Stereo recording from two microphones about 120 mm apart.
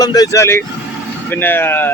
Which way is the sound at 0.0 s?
30° left (ahead or behind).